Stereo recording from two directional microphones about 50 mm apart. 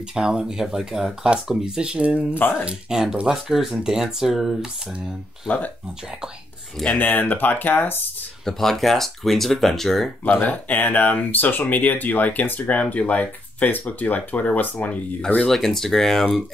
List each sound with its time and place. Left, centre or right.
0.1 s speech: centre
1.8 s speech: right
2.3 s speech: left
2.6 s speech: centre
7.0 s speech: left
8.5 s speech: centre
10.3 s speech: left
15.4 s speech: centre